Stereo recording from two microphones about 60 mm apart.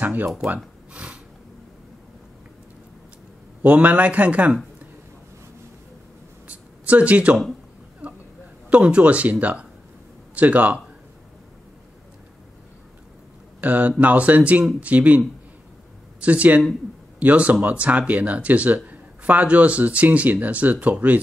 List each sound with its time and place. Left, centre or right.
0.0 s speech: right
0.9 s snort: centre
3.6 s speech: right
6.4 s a sound: right
8.6 s speech: right
13.6 s speech: right